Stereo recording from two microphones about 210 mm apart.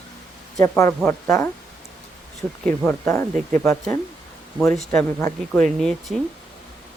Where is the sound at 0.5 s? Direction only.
15° left (ahead or behind).